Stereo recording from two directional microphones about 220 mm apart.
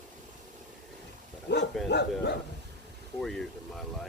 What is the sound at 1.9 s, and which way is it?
Speech, 50° left (ahead or behind).